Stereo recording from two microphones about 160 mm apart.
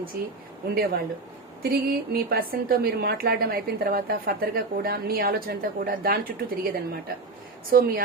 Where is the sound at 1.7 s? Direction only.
70° right (ahead or behind).